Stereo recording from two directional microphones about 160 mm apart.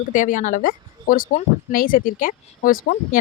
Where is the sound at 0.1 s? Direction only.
55° left (ahead or behind).